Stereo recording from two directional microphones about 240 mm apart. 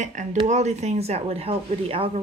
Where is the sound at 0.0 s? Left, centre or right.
Right.